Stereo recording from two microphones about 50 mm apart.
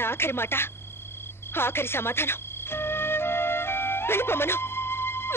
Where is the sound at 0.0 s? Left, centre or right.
Left.